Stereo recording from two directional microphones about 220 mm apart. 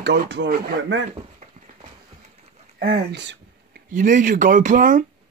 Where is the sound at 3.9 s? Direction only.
35° right (ahead or behind).